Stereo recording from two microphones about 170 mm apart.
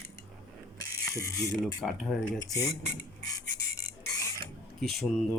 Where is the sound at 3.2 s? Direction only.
80° left.